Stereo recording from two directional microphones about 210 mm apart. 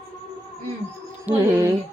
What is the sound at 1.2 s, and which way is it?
Speech, 15° right (ahead or behind).